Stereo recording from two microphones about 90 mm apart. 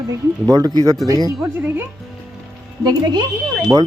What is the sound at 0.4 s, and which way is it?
Speech, 45° right (ahead or behind).